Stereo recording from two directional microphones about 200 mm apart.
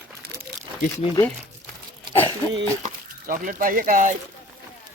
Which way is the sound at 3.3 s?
45° right (ahead or behind).